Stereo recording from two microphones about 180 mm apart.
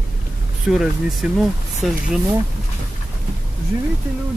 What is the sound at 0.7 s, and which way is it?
Speech, 5° right (ahead or behind).